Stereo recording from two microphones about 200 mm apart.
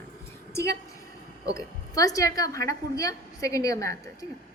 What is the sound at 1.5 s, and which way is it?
A woman's voice, 15° left (ahead or behind).